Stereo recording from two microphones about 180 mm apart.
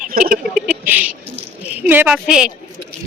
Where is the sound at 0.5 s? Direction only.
5° right (ahead or behind).